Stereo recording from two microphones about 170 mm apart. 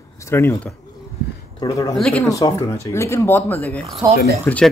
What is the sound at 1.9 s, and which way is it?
Speech, 5° left (ahead or behind).